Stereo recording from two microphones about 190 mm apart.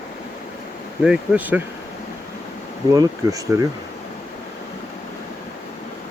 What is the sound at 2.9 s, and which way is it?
Speech, 15° right (ahead or behind).